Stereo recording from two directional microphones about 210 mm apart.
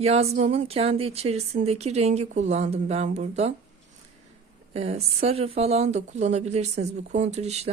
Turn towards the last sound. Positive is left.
turn(degrees=-30)  # may be behind; listen again after turning